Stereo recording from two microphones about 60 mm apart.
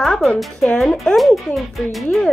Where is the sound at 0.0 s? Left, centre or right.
Centre.